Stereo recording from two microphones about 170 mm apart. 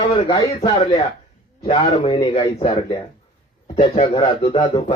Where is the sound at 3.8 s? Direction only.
45° left (ahead or behind).